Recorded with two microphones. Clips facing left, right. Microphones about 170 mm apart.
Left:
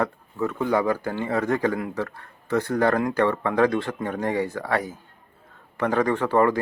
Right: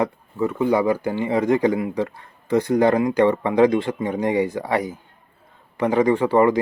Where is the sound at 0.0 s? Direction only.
10° right (ahead or behind).